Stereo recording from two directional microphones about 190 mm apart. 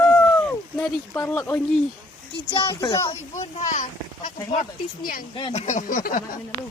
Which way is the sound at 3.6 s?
40° left (ahead or behind).